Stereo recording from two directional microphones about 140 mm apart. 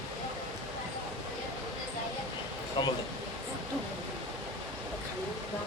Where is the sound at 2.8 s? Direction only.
35° left (ahead or behind).